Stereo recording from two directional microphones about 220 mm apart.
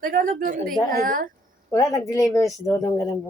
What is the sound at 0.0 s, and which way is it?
A woman's voice, 40° right (ahead or behind).